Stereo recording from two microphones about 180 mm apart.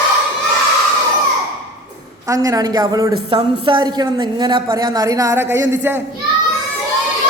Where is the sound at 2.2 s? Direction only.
20° right (ahead or behind).